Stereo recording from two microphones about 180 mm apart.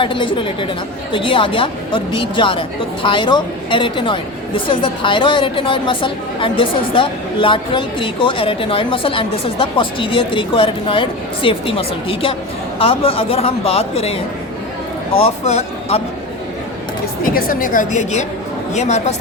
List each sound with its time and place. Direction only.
0.0 s a woman's voice: 30° left (ahead or behind)
15.2 s speech: 35° left (ahead or behind)
17.2 s a woman's voice: 55° left (ahead or behind)